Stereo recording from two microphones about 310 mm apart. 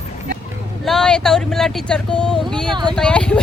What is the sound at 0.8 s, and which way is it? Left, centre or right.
Speech, centre.